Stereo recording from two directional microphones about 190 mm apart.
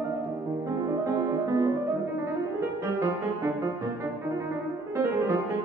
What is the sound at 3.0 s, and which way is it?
Music, 15° right (ahead or behind).